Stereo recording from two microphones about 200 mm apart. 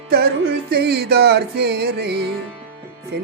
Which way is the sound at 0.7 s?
55° right (ahead or behind).